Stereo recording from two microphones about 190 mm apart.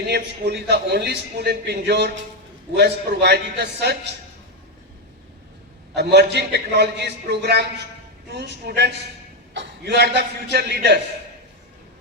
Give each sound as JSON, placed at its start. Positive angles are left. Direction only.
{"t": 0.1, "sound": "a man's voice", "side_deg": -60}
{"t": 5.9, "sound": "a man's voice", "side_deg": -60}